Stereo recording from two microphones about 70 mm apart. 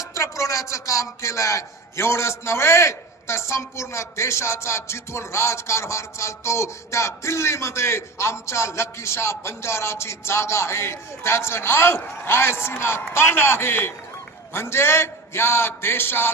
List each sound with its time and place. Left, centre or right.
0.0 s speech: left